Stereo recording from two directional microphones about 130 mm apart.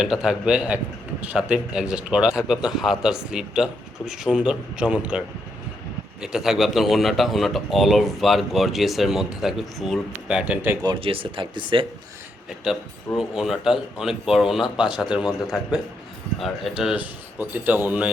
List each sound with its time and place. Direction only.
0.0 s a man's voice: 5° right (ahead or behind)
6.2 s a man's voice: 5° right (ahead or behind)
10.8 s speech: 45° right (ahead or behind)
13.1 s a man's voice: 5° right (ahead or behind)